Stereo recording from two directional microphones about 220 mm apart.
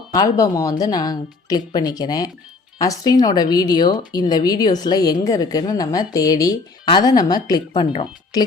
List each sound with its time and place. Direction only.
0.1 s a woman's voice: 15° left (ahead or behind)